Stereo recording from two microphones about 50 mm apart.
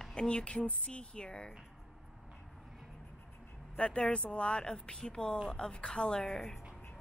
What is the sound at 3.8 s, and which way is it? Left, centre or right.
Speech, centre.